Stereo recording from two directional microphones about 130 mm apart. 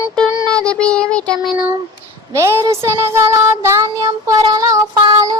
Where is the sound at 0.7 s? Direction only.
5° left (ahead or behind).